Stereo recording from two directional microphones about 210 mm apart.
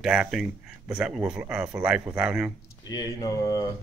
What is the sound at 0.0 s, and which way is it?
Speech, centre (ahead or behind).